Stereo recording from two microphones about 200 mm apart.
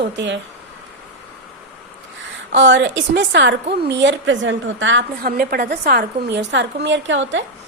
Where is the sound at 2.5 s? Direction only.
65° right (ahead or behind).